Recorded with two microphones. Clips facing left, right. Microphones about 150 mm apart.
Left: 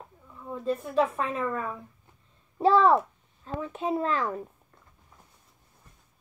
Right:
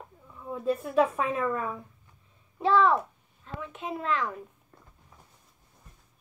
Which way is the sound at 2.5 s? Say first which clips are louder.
Left 3 dB; 35° left (ahead or behind).